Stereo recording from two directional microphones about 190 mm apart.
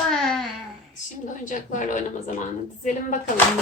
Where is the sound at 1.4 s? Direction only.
40° left (ahead or behind).